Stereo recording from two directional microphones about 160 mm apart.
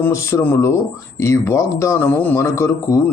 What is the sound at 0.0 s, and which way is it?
Speech, 15° left (ahead or behind).